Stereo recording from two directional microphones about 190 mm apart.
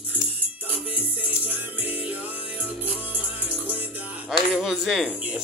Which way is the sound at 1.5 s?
10° right (ahead or behind).